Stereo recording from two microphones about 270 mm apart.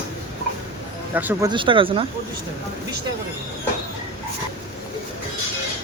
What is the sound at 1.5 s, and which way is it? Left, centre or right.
Speech, centre.